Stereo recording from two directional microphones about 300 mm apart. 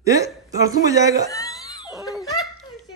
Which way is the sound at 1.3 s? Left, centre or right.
Centre.